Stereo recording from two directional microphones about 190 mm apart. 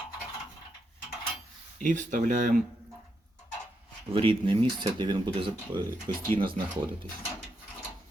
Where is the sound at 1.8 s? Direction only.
40° right (ahead or behind).